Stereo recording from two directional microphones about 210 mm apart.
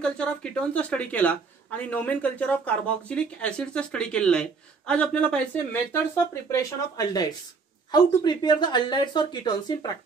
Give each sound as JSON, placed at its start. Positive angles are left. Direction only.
{"t": 0.0, "sound": "speech", "side_deg": 5}
{"t": 6.5, "sound": "speech", "side_deg": 15}